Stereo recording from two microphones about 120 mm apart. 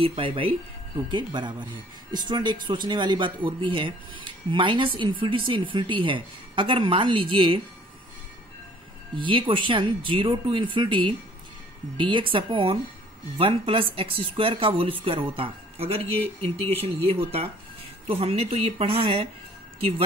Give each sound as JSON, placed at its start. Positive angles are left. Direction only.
{"t": 0.0, "sound": "speech", "side_deg": -50}
{"t": 9.1, "sound": "speech", "side_deg": -45}